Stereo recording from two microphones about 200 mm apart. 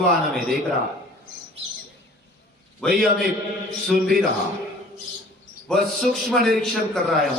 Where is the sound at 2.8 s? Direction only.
5° left (ahead or behind).